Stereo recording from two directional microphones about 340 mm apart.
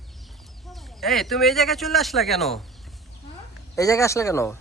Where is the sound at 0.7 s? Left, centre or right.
Centre.